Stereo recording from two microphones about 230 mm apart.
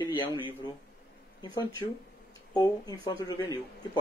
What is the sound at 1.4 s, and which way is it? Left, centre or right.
Speech, centre.